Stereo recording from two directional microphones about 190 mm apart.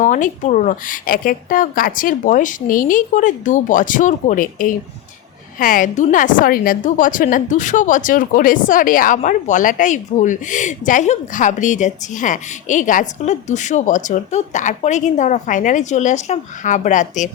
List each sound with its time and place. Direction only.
0.0 s a woman's voice: 40° left (ahead or behind)